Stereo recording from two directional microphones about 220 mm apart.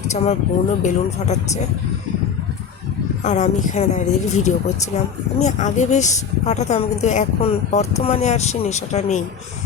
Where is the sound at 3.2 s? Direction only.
35° left (ahead or behind).